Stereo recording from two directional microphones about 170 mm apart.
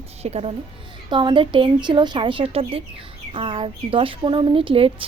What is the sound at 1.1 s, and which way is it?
Speech, 25° right (ahead or behind).